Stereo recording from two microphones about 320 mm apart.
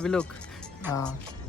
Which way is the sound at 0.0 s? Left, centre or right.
Centre.